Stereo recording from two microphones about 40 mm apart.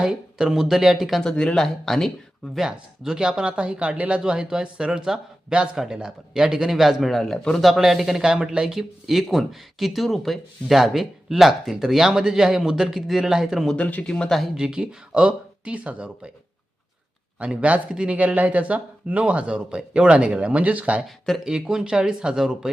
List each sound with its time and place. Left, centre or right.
0.0 s speech: centre
1.2 s speech: centre
2.6 s speech: centre; by 4.2 s right
4.3 s speech: centre
7.3 s speech: centre
7.6 s speech: centre
8.6 s speech: centre
13.7 s speech: left
14.3 s speech: centre
14.5 s speech: centre; by 16.0 s right
17.4 s speech: right
18.2 s speech: right
21.4 s speech: centre